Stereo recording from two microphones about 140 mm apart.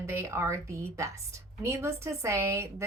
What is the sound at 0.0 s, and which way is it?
A woman's voice, 20° right (ahead or behind).